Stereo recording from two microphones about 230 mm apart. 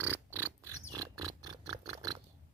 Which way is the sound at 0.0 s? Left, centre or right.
Centre.